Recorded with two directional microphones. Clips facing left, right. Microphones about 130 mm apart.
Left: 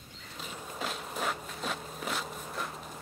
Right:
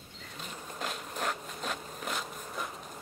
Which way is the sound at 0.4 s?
Centre (ahead or behind).